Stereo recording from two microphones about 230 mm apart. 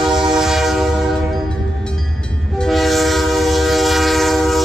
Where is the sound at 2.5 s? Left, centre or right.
Centre.